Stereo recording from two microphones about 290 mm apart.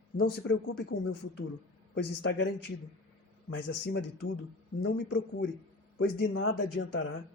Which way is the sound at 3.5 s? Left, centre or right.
Left.